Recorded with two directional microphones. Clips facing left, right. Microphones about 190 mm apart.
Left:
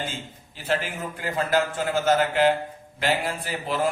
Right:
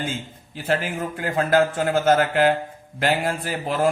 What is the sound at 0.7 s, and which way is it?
A man's voice, 45° right (ahead or behind).